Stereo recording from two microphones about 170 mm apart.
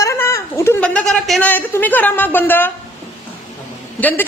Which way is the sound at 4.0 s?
10° left (ahead or behind).